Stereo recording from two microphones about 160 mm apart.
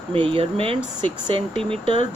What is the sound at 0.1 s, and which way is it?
Speech, 35° right (ahead or behind).